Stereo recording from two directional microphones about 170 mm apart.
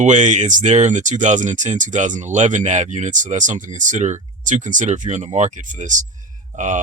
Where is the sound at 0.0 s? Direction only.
45° right (ahead or behind).